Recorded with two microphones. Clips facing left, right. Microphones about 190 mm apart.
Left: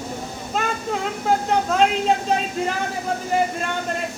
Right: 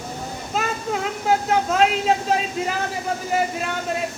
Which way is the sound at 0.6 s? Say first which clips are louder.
Even; 5° right (ahead or behind).